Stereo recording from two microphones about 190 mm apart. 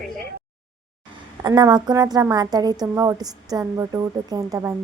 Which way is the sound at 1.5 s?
20° right (ahead or behind).